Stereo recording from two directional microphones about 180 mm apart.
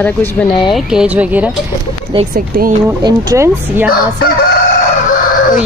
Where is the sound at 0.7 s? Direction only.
5° right (ahead or behind).